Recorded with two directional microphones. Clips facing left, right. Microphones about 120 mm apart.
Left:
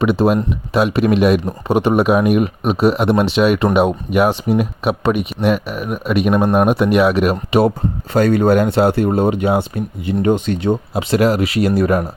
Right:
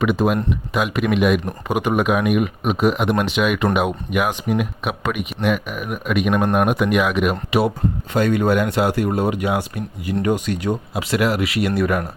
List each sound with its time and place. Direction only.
0.0 s speech: 35° left (ahead or behind)